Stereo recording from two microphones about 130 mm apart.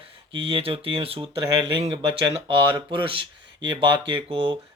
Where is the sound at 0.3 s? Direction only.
40° right (ahead or behind).